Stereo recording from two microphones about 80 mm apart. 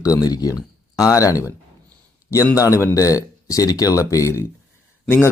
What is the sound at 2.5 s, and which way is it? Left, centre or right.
Speech, left.